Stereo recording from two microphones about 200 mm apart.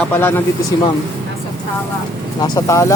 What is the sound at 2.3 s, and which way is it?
Speech, 20° left (ahead or behind).